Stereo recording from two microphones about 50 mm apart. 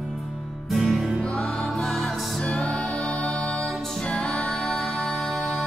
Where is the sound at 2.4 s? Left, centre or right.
Left.